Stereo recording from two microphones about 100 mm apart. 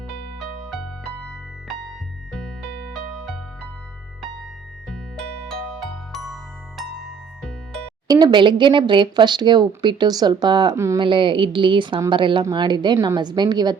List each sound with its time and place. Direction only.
0.3 s music: centre (ahead or behind)
4.9 s music: 5° left (ahead or behind)
8.0 s speech: 45° right (ahead or behind)
10.8 s speech: 30° right (ahead or behind)
11.0 s a woman's voice: 55° right (ahead or behind)